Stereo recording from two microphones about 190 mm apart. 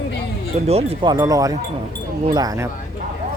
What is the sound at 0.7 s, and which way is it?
Speech, 30° right (ahead or behind).